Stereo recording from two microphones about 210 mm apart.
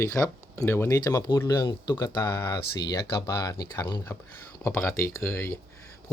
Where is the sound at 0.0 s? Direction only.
15° left (ahead or behind).